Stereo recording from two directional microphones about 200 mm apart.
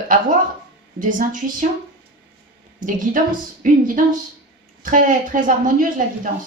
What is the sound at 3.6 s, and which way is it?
A woman's voice, 40° right (ahead or behind).